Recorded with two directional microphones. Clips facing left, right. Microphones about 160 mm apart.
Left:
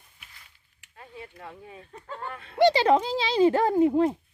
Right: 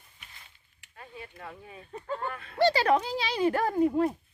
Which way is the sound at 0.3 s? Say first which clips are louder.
Right 1 dB; 25° right (ahead or behind).